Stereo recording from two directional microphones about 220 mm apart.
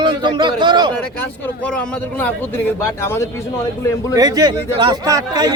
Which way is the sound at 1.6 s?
5° left (ahead or behind).